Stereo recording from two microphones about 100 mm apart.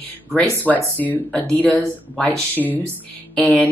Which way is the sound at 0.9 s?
15° left (ahead or behind).